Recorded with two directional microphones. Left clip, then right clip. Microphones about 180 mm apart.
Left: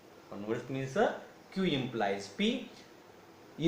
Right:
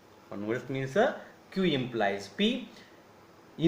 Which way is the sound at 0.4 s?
50° right (ahead or behind).